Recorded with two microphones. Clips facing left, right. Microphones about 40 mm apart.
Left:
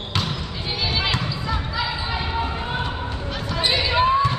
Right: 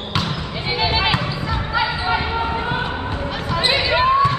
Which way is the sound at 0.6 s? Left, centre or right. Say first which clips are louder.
Right 5 dB; right.